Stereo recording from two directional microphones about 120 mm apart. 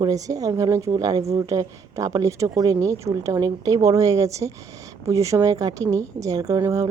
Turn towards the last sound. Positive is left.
turn(degrees=-25)  # may be behind; listen again after turning